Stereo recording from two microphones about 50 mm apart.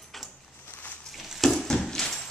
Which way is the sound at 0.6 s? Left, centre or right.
Left.